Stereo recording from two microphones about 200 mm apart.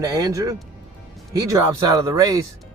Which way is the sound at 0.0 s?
15° right (ahead or behind).